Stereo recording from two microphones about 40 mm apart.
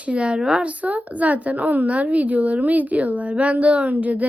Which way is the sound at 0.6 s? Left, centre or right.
Right.